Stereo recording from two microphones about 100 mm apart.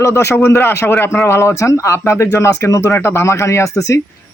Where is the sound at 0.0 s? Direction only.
25° left (ahead or behind).